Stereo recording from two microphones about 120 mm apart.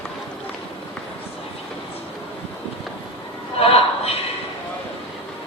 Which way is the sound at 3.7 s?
55° left (ahead or behind).